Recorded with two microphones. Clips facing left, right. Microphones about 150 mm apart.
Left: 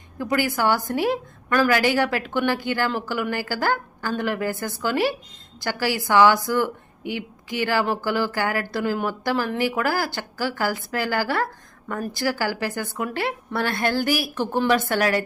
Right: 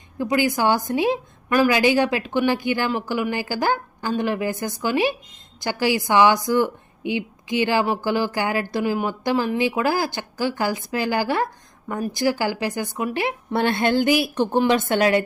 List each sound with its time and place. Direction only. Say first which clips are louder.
0.2 s a woman's voice: right 2 dB; 15° right (ahead or behind)